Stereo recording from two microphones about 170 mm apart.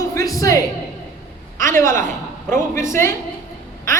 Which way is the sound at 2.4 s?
15° left (ahead or behind).